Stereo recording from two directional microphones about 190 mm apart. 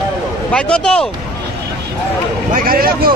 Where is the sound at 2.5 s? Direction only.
50° right (ahead or behind).